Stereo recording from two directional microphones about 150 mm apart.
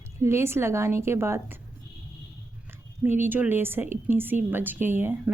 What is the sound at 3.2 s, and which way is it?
A woman's voice, 15° right (ahead or behind).